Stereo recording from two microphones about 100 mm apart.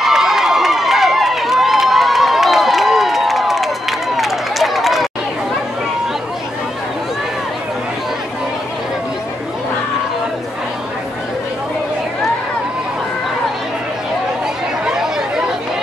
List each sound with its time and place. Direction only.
0.0 s run: 5° right (ahead or behind)
14.9 s chatter: 5° right (ahead or behind)